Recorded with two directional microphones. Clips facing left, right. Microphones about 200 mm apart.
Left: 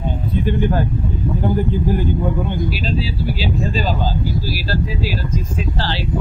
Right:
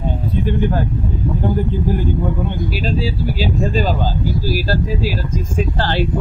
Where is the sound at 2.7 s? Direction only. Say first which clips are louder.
Right 2 dB; 45° right (ahead or behind).